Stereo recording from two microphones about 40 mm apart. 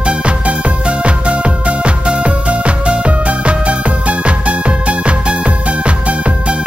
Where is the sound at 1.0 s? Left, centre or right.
Right.